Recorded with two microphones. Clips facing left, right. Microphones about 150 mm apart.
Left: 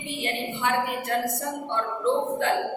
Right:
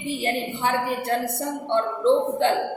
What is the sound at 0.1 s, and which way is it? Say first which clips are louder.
A woman's voice: right 4 dB; 35° right (ahead or behind).